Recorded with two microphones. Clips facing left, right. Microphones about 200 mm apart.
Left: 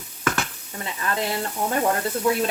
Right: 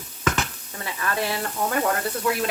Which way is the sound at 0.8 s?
20° left (ahead or behind).